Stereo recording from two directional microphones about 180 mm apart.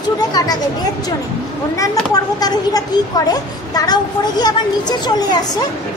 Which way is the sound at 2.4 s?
20° left (ahead or behind).